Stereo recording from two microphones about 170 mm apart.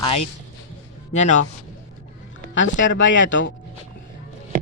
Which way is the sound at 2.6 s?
90° left.